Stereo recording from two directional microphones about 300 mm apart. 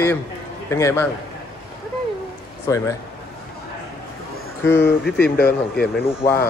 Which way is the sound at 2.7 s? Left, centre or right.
Centre.